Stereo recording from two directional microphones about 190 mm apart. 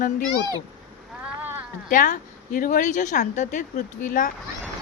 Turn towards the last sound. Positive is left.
turn(degrees=45)  # may be behind; listen again after turning